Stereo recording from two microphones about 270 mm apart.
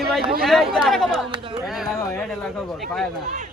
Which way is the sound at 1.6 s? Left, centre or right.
Centre.